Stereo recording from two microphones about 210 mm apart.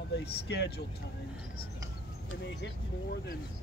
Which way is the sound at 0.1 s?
50° left (ahead or behind).